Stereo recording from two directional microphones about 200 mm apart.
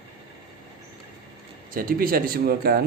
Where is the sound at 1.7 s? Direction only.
45° right (ahead or behind).